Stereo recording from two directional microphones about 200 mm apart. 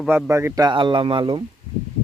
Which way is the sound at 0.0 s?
10° right (ahead or behind).